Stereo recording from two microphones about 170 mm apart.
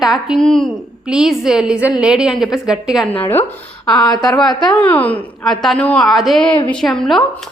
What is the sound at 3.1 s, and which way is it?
Speech, 10° left (ahead or behind).